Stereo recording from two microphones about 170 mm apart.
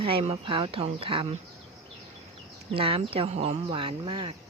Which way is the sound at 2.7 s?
30° right (ahead or behind).